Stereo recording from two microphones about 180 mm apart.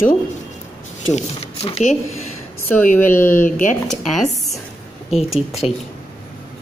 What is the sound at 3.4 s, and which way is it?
Speech, 45° left (ahead or behind).